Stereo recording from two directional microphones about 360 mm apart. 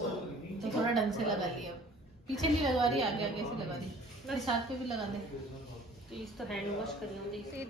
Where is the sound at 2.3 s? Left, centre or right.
Centre.